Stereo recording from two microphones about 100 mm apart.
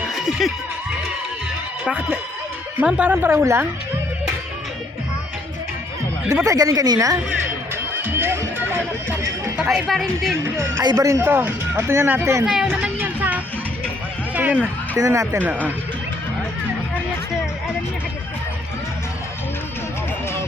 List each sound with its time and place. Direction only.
0.1 s a sound: 5° right (ahead or behind)
1.8 s speech: 15° right (ahead or behind)
6.4 s a woman's voice: 35° right (ahead or behind)
8.0 s music: 25° right (ahead or behind)
9.6 s speech: 5° right (ahead or behind)
10.9 s speech: 30° right (ahead or behind)
12.5 s music: 10° right (ahead or behind)
14.9 s a woman's voice: 35° right (ahead or behind)
15.4 s speech: 15° right (ahead or behind)